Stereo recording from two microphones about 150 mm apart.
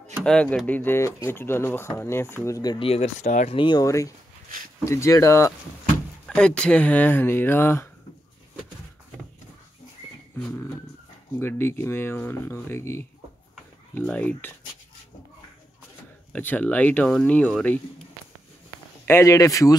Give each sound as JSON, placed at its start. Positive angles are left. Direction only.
{"t": 0.2, "sound": "speech", "side_deg": 5}
{"t": 2.8, "sound": "speech", "side_deg": 45}
{"t": 3.5, "sound": "speech", "side_deg": 30}
{"t": 6.2, "sound": "speech", "side_deg": 5}
{"t": 11.3, "sound": "speech", "side_deg": 15}
{"t": 16.3, "sound": "speech", "side_deg": 10}
{"t": 19.0, "sound": "speech", "side_deg": 20}